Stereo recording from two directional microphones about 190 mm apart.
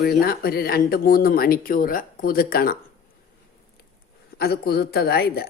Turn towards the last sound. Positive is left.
turn(degrees=55)  # may be behind; listen again after turning